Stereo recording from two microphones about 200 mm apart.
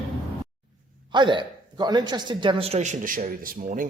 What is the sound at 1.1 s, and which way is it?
Speech, 25° right (ahead or behind).